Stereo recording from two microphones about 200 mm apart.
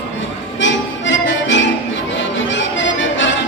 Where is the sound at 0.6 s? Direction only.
70° left (ahead or behind).